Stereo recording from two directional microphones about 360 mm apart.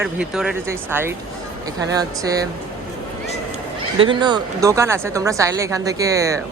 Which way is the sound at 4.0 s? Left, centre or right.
Centre.